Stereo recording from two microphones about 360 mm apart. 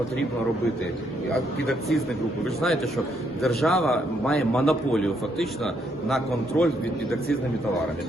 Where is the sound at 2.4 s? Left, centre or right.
Centre.